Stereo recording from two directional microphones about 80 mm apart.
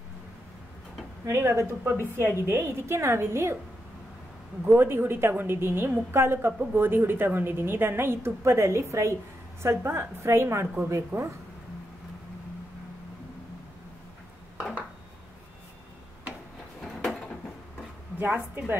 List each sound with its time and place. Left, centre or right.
1.2 s a woman's voice: right
4.6 s a woman's voice: right
16.8 s a sound: centre
18.2 s a woman's voice: right